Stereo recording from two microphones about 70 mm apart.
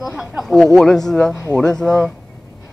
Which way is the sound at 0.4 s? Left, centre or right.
Centre.